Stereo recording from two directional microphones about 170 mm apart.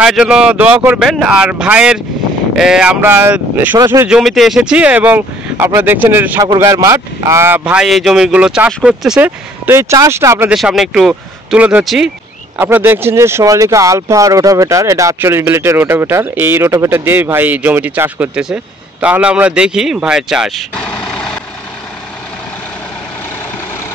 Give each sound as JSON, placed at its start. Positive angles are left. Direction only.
{"t": 0.0, "sound": "speech", "side_deg": -5}
{"t": 3.7, "sound": "speech", "side_deg": -25}
{"t": 4.0, "sound": "speech", "side_deg": -5}
{"t": 9.7, "sound": "speech", "side_deg": -15}
{"t": 10.5, "sound": "speech", "side_deg": 0}
{"t": 12.5, "sound": "speech", "side_deg": -15}